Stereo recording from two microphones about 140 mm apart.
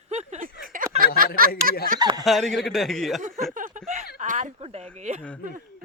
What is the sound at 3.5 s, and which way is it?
Snicker, 60° right (ahead or behind).